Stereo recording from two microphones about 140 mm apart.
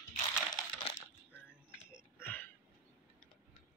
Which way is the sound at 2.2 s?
15° left (ahead or behind).